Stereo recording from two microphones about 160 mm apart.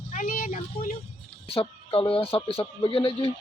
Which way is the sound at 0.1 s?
55° left (ahead or behind).